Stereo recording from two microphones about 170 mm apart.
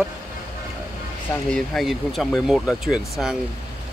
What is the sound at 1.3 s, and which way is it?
Speech, 5° left (ahead or behind).